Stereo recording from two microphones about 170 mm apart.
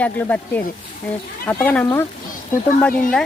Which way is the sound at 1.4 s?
10° left (ahead or behind).